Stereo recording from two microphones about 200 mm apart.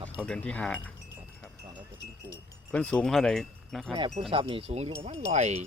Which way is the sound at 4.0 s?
30° right (ahead or behind).